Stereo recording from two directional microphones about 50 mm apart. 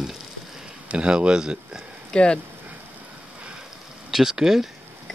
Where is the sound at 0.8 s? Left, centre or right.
Right.